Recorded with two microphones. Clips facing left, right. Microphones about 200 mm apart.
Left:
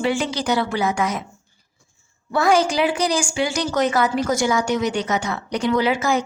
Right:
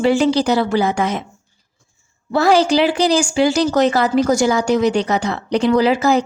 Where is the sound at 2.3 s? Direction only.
35° right (ahead or behind).